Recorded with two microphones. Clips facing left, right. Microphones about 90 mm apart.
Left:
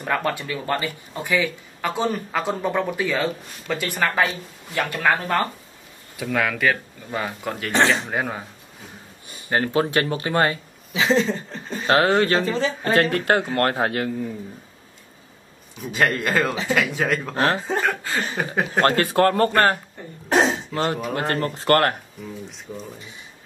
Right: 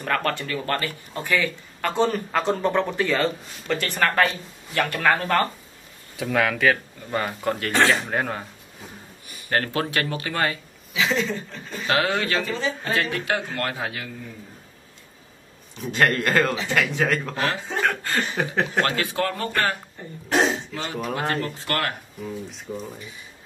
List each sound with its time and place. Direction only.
0.0 s speech: 10° left (ahead or behind)
4.7 s speech: 15° left (ahead or behind)
6.1 s speech: centre (ahead or behind)
7.7 s speech: 20° left (ahead or behind)
8.1 s speech: 5° left (ahead or behind)
9.5 s speech: 20° left (ahead or behind); by 14.1 s 45° left (ahead or behind)
15.7 s speech: centre (ahead or behind)
17.4 s speech: 35° left (ahead or behind)
17.7 s chuckle: centre (ahead or behind)
18.8 s speech: 45° left (ahead or behind)
20.2 s a sound: 40° left (ahead or behind)
21.0 s speech: centre (ahead or behind)
21.3 s speech: 40° left (ahead or behind)
22.2 s speech: 5° right (ahead or behind)